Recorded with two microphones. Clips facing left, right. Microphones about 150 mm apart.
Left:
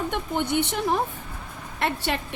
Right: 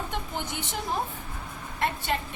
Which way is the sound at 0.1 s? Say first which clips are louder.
Left 8 dB; 60° left (ahead or behind).